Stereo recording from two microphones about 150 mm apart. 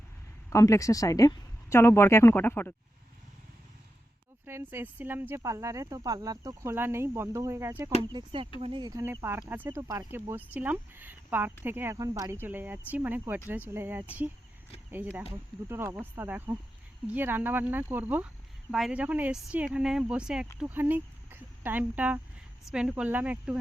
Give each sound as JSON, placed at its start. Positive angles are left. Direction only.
{"t": 0.5, "sound": "speech", "side_deg": 20}
{"t": 4.4, "sound": "speech", "side_deg": -15}
{"t": 8.0, "sound": "speech", "side_deg": -35}
{"t": 9.0, "sound": "speech", "side_deg": -15}